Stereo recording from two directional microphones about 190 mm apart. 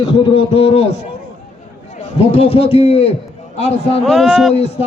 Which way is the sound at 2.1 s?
30° left (ahead or behind).